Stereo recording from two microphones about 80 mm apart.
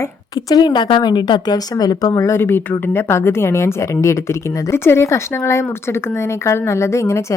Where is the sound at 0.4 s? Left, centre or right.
Left.